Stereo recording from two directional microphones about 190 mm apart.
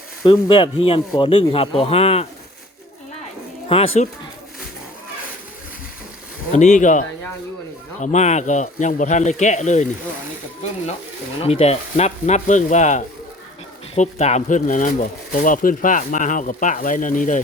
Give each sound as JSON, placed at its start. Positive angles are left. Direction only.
{"t": 0.3, "sound": "speech", "side_deg": 25}
{"t": 3.7, "sound": "speech", "side_deg": 30}
{"t": 6.5, "sound": "speech", "side_deg": 40}
{"t": 8.0, "sound": "speech", "side_deg": 35}
{"t": 11.4, "sound": "speech", "side_deg": 35}